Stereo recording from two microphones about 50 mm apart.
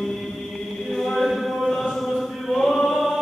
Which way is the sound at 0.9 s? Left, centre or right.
Centre.